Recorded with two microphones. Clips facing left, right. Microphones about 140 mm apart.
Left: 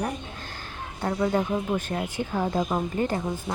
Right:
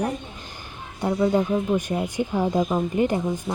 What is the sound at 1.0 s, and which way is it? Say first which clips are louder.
Speech: right 4 dB; 10° right (ahead or behind).